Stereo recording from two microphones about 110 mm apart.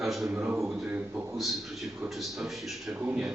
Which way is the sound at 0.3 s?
15° right (ahead or behind).